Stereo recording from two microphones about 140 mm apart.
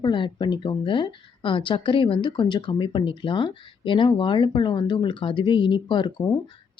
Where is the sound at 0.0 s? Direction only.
30° left (ahead or behind).